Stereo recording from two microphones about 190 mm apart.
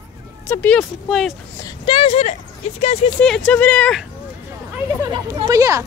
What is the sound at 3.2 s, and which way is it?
Speech, 5° left (ahead or behind).